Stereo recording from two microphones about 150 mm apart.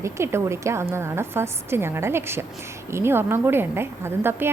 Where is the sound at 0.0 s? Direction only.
15° right (ahead or behind).